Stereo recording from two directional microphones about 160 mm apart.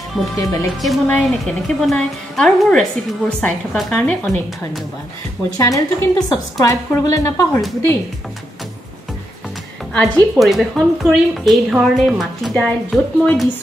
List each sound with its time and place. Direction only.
0.4 s speech: 20° left (ahead or behind)
0.7 s a woman's voice: centre (ahead or behind)
5.6 s speech: 25° left (ahead or behind)
9.9 s a woman's voice: 5° left (ahead or behind)